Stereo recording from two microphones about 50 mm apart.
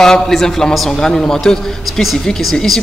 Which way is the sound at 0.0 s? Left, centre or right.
Centre.